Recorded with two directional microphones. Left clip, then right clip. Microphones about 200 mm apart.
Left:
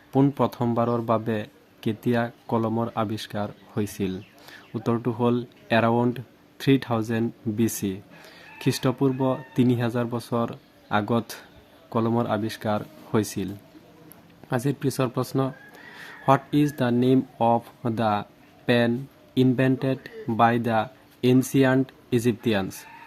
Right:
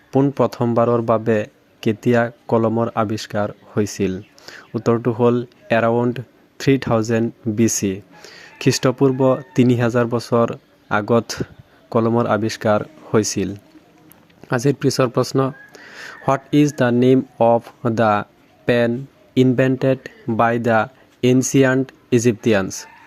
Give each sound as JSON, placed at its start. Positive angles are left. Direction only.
{"t": 0.1, "sound": "a man's voice", "side_deg": -25}